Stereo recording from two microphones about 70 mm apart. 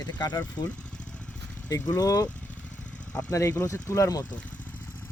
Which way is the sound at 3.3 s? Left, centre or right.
Left.